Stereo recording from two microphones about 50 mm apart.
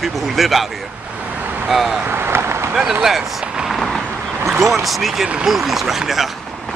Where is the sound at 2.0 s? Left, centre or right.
Right.